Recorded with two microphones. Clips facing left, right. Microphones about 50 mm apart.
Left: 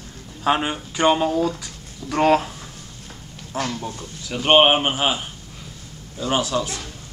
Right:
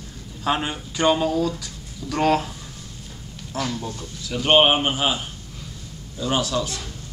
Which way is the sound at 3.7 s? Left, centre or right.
Centre.